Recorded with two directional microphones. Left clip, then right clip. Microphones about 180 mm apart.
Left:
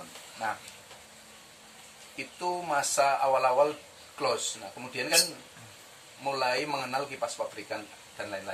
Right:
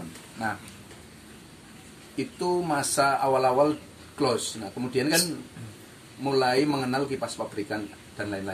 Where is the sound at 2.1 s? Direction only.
10° right (ahead or behind).